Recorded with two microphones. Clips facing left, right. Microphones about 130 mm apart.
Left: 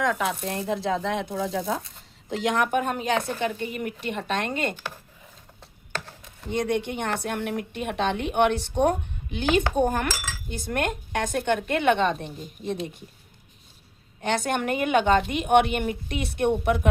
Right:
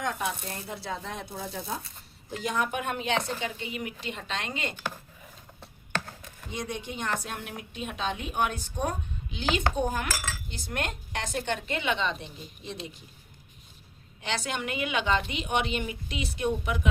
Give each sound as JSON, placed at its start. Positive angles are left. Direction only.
{"t": 0.0, "sound": "speech", "side_deg": 90}
{"t": 2.6, "sound": "speech", "side_deg": 45}
{"t": 3.2, "sound": "a woman's voice", "side_deg": 55}
{"t": 6.5, "sound": "a woman's voice", "side_deg": 60}
{"t": 14.2, "sound": "a woman's voice", "side_deg": 50}